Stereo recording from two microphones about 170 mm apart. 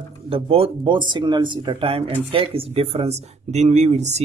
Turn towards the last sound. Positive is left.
turn(degrees=-40)  # may be behind; listen again after turning